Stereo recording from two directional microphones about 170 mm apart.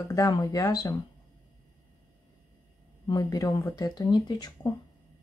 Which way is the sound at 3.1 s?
20° left (ahead or behind).